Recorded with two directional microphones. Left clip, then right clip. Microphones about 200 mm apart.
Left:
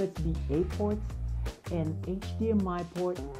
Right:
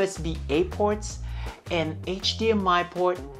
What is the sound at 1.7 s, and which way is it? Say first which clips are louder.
Speech: right 8 dB; 10° right (ahead or behind).